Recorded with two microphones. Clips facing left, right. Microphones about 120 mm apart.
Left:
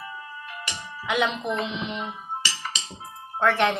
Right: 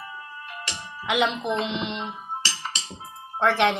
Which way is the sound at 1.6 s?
70° right (ahead or behind).